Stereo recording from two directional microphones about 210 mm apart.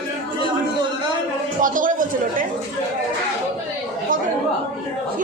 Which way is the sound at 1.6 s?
40° right (ahead or behind).